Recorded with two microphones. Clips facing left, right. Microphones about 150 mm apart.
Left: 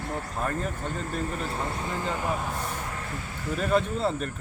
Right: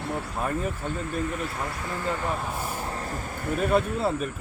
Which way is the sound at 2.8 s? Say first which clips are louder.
Right 3 dB; 35° right (ahead or behind).